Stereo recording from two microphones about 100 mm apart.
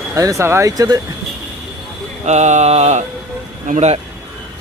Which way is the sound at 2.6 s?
90° right.